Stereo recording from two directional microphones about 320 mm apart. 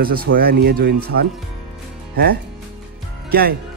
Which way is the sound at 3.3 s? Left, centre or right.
Right.